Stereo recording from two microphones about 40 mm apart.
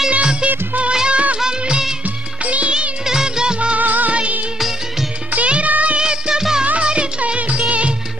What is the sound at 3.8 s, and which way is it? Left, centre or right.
Music of bollywood, right.